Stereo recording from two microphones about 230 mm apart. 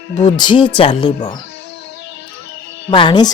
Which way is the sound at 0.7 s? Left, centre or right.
Left.